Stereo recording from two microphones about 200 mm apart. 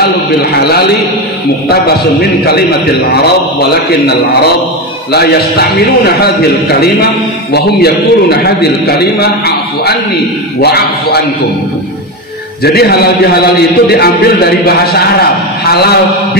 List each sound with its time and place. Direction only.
5.1 s a man's voice: 55° left (ahead or behind)
7.5 s a man's voice: 55° left (ahead or behind)
10.6 s a man's voice: 55° left (ahead or behind)
12.6 s a man's voice: 55° left (ahead or behind)